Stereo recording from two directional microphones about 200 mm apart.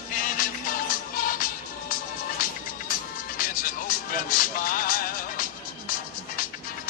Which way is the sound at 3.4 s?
45° left (ahead or behind).